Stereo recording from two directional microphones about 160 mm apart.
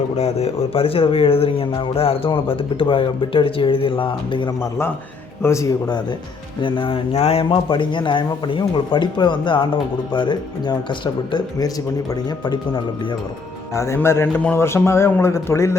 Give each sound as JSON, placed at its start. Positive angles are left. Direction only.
{"t": 0.2, "sound": "speech", "side_deg": 40}
{"t": 5.4, "sound": "speech", "side_deg": 20}
{"t": 6.6, "sound": "speech", "side_deg": 30}
{"t": 13.7, "sound": "a man's voice", "side_deg": 15}